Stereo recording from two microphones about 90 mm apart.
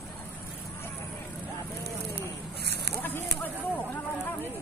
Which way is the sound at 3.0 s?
20° left (ahead or behind).